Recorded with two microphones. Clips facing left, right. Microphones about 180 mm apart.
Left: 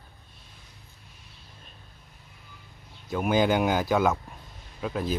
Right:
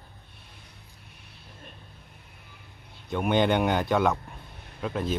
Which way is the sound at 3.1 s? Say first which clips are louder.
Even; centre (ahead or behind).